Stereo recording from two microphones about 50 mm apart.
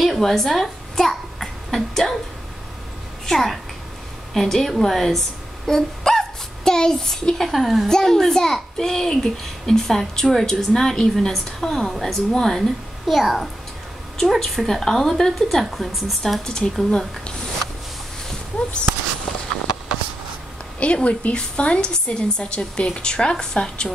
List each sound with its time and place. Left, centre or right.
0.0 s a child's voice: centre
3.3 s a woman's voice: centre
7.9 s a child's voice: centre
20.8 s a woman's voice: left